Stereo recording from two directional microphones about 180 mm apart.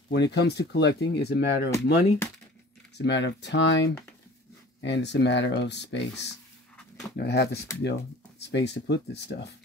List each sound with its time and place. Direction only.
0.1 s speech: 70° left (ahead or behind)
3.0 s speech: 80° left
4.8 s speech: 75° left (ahead or behind)